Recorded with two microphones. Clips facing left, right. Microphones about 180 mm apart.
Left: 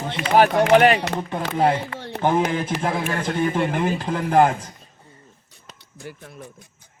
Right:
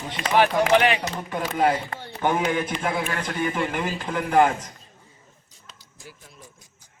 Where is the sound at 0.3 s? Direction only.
45° left (ahead or behind).